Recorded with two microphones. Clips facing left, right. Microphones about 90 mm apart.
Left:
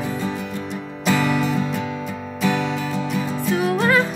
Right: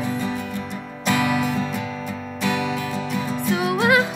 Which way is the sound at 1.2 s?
10° right (ahead or behind).